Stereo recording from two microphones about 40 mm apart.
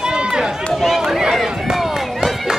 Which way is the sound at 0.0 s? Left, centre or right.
Centre.